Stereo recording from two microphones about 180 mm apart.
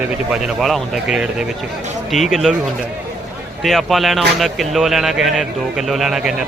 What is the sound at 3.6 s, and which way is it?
Speech, centre (ahead or behind).